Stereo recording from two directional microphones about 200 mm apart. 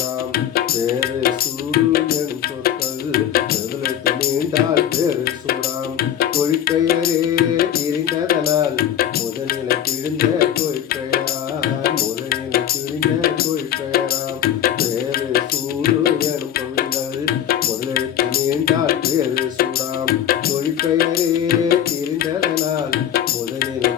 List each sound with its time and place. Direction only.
0.3 s music: 50° left (ahead or behind)
1.7 s tabla: 50° left (ahead or behind)
2.6 s music: 50° left (ahead or behind)
10.2 s music: 50° left (ahead or behind)
20.7 s music: 50° left (ahead or behind)